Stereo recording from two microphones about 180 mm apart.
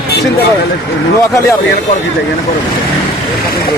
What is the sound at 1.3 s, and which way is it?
Speech, 15° left (ahead or behind).